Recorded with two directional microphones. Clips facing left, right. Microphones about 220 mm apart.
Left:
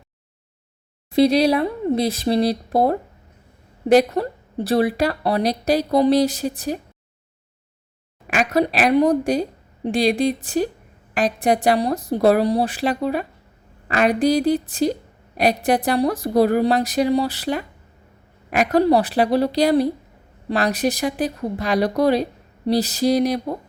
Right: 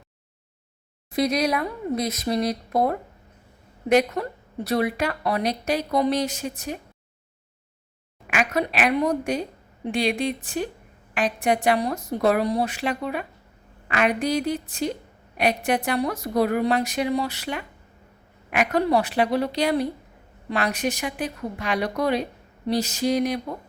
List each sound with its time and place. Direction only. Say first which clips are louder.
1.1 s speech: left 7 dB; 30° left (ahead or behind)
8.3 s a woman's voice: left 5 dB; 35° left (ahead or behind)